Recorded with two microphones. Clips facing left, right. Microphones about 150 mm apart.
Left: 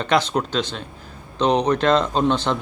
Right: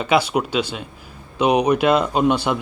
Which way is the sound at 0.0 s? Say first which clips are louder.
Right 2 dB; 10° right (ahead or behind).